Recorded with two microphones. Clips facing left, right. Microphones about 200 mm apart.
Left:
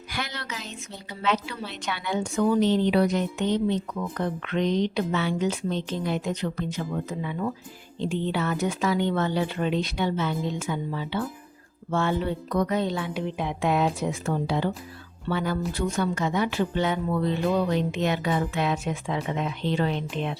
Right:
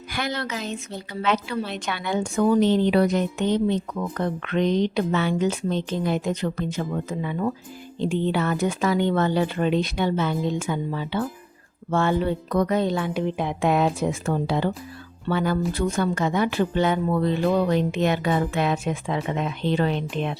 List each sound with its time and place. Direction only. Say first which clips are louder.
0.1 s speech: right 6 dB; 50° right (ahead or behind)